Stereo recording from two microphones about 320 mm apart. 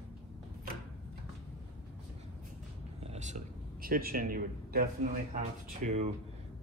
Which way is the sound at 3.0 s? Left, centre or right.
Right.